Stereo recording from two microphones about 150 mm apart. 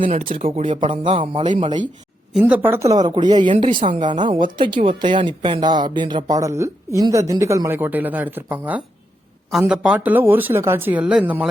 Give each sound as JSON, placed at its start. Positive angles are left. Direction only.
{"t": 0.1, "sound": "speech", "side_deg": -40}
{"t": 2.4, "sound": "speech", "side_deg": -15}